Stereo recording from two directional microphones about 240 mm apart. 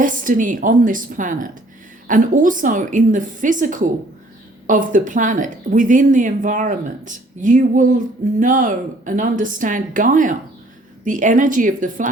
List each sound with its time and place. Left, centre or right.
0.0 s speech: right